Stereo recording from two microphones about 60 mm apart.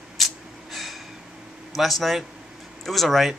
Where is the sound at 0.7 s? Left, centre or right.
Centre.